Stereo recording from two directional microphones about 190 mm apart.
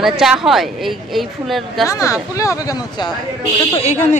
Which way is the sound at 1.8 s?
15° left (ahead or behind).